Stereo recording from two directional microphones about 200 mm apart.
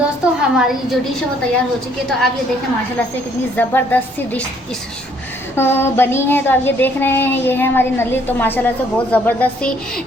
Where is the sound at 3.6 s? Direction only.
10° left (ahead or behind).